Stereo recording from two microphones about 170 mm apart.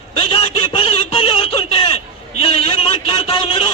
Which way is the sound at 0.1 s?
30° left (ahead or behind).